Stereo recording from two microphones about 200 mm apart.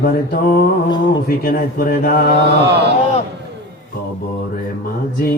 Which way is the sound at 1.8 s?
45° left (ahead or behind).